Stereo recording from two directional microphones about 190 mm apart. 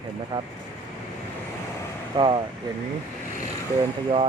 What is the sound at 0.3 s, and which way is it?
Speech, 20° right (ahead or behind).